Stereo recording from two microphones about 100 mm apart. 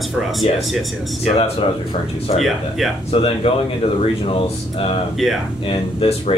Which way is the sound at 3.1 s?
75° left (ahead or behind).